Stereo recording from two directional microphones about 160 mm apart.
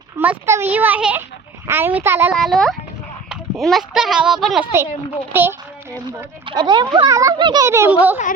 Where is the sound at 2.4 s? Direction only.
Centre (ahead or behind).